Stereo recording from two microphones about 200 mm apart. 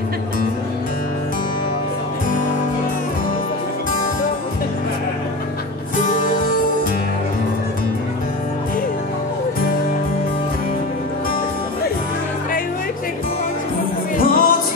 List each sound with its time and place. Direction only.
14.1 s music: 45° left (ahead or behind)